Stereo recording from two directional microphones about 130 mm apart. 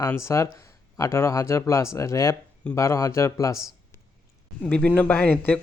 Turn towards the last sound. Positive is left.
turn(degrees=10)  # may be behind; listen again after turning